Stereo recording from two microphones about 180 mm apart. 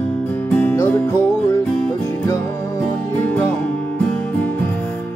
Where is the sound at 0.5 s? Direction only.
10° left (ahead or behind).